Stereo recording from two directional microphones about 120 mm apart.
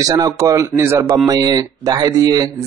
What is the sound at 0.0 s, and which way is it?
A man's voice, 30° right (ahead or behind).